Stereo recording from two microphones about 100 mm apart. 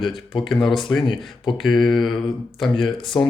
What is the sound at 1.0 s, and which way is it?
Speech, 55° left (ahead or behind).